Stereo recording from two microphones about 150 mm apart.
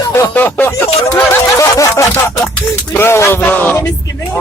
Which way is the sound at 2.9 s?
15° left (ahead or behind).